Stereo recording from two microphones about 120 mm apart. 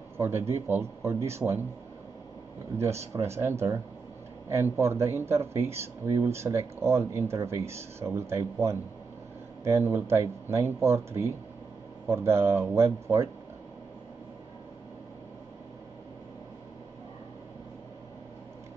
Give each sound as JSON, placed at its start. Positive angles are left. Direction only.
{"t": 0.2, "sound": "speech", "side_deg": -20}
{"t": 2.8, "sound": "speech", "side_deg": -25}